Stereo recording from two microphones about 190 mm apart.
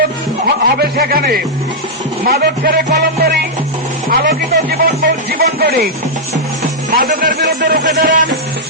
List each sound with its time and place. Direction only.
0.4 s a sound: 50° right (ahead or behind)
2.2 s speech: 50° right (ahead or behind)
4.1 s music: 50° right (ahead or behind)
5.4 s speech: 55° right (ahead or behind)
6.9 s speech: 50° right (ahead or behind)